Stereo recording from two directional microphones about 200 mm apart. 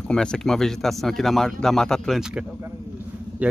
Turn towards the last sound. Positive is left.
turn(degrees=-5)  # may be behind; listen again after turning